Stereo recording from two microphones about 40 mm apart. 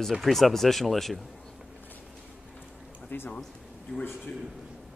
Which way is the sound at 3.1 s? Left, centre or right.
Left.